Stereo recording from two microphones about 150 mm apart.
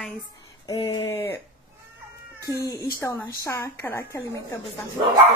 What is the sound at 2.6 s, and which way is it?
A woman's voice, 20° left (ahead or behind).